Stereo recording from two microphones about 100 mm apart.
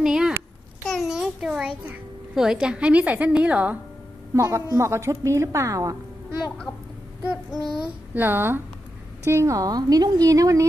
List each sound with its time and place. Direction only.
0.0 s a sound: 5° right (ahead or behind)
2.3 s a woman's voice: 5° right (ahead or behind)
4.3 s a woman's voice: 30° right (ahead or behind)
8.1 s a woman's voice: 20° right (ahead or behind)